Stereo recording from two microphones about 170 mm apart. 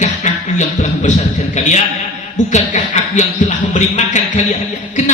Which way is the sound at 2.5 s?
45° left (ahead or behind).